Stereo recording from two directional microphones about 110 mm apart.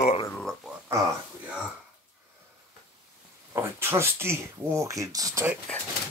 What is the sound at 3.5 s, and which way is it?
Speech, 20° right (ahead or behind).